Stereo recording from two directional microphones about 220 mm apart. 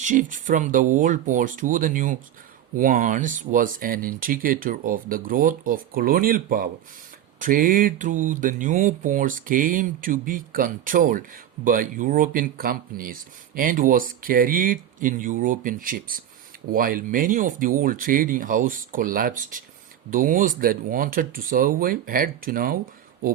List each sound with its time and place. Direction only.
0.0 s speech: 35° right (ahead or behind)